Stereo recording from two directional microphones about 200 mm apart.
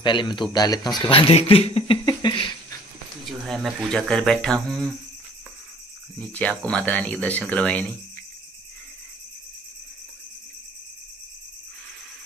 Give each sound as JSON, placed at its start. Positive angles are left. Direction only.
{"t": 0.0, "sound": "speech", "side_deg": 25}
{"t": 3.3, "sound": "speech", "side_deg": 0}
{"t": 6.1, "sound": "speech", "side_deg": 5}